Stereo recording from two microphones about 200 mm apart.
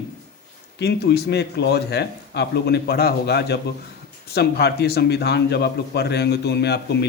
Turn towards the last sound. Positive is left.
turn(degrees=55)  # may be behind; listen again after turning